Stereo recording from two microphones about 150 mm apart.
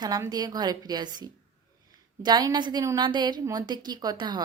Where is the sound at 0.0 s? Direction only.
25° right (ahead or behind).